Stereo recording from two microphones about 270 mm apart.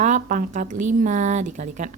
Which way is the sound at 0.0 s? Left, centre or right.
Right.